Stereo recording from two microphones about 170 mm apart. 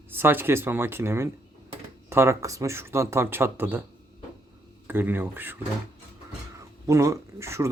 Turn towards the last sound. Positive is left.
turn(degrees=-15)  # may be behind; listen again after turning